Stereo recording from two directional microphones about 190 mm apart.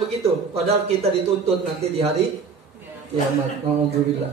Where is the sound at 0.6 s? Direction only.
30° right (ahead or behind).